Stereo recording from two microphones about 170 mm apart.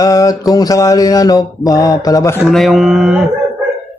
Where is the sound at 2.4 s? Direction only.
Centre (ahead or behind).